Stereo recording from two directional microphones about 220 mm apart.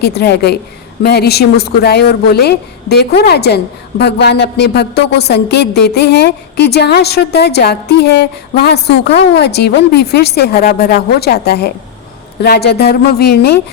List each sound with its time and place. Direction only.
0.0 s a woman's voice: 50° left (ahead or behind)